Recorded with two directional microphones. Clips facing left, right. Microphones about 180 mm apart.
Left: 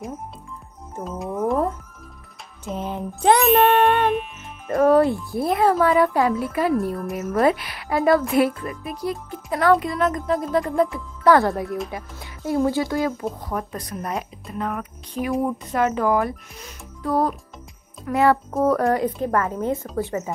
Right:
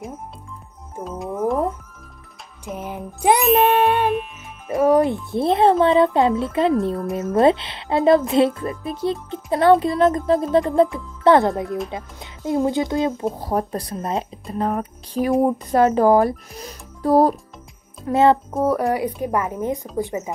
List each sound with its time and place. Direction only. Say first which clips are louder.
1.0 s music: right 1 dB; centre (ahead or behind)
2.6 s music: left 2 dB; 15° right (ahead or behind)
3.3 s music: right 1 dB; centre (ahead or behind)
4.6 s speech: even; 15° right (ahead or behind)
13.4 s speech: right 6 dB; 35° right (ahead or behind)
18.0 s speech: right 3 dB; 25° right (ahead or behind)
18.6 s speech: left 1 dB; 15° right (ahead or behind)